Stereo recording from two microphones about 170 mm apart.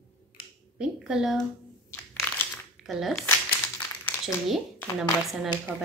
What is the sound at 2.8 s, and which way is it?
Speech, centre (ahead or behind).